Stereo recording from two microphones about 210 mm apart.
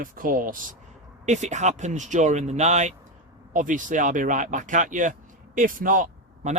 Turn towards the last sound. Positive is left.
turn(degrees=-35)  # may be behind; listen again after turning